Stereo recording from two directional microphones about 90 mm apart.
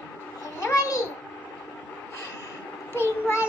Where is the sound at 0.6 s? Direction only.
40° left (ahead or behind).